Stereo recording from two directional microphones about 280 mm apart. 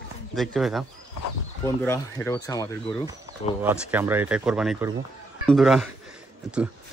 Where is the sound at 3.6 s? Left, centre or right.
Centre.